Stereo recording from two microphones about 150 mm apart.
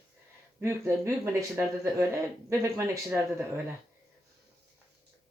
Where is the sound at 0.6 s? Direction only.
20° right (ahead or behind).